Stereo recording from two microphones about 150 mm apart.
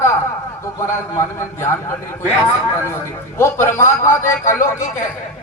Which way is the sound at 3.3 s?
15° left (ahead or behind).